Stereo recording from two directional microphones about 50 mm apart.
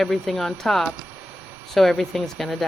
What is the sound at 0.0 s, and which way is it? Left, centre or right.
Speech, centre.